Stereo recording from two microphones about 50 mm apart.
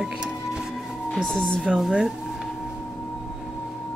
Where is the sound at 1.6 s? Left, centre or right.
Centre.